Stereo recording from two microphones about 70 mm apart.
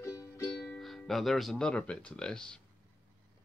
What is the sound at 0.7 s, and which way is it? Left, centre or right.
Speech, centre.